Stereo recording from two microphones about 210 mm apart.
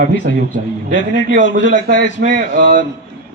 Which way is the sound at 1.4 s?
60° left (ahead or behind).